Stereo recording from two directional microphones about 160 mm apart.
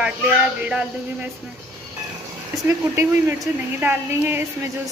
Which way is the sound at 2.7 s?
20° right (ahead or behind).